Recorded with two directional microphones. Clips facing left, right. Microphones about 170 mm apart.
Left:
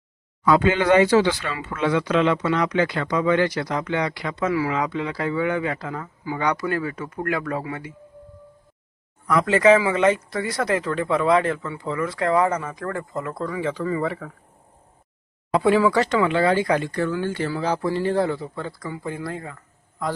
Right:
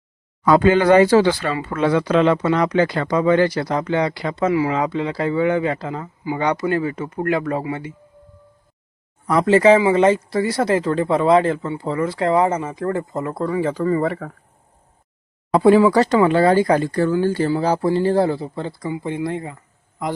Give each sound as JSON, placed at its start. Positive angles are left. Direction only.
{"t": 0.4, "sound": "speech", "side_deg": -40}
{"t": 9.2, "sound": "speech", "side_deg": -30}
{"t": 15.5, "sound": "speech", "side_deg": -35}